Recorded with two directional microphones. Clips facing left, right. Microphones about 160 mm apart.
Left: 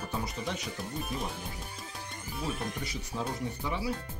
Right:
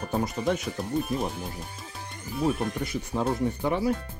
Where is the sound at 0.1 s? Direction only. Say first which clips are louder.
Right 11 dB; 50° right (ahead or behind).